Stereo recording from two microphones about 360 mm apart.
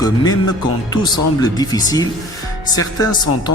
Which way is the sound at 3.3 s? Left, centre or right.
Left.